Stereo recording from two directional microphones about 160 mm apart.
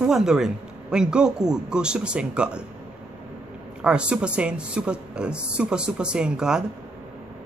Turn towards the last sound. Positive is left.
turn(degrees=-5)  # may be behind; listen again after turning